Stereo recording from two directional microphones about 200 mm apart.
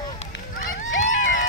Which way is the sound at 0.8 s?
70° left (ahead or behind).